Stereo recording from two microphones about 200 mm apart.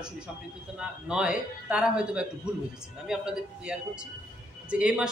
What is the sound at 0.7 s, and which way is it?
A man's voice, 5° right (ahead or behind).